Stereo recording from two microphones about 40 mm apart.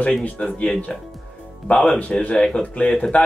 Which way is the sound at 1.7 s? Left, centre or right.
Left.